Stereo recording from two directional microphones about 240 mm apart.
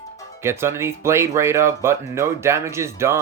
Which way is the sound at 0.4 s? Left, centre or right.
Centre.